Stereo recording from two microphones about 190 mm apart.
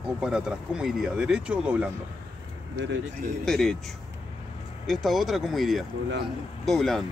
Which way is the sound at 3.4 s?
Centre (ahead or behind).